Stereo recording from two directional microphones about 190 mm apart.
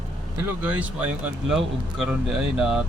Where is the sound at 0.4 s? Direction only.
10° right (ahead or behind).